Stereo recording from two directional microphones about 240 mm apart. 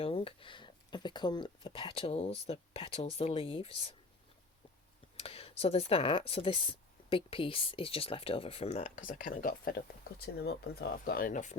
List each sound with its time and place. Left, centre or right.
0.0 s speech: left
5.1 s speech: left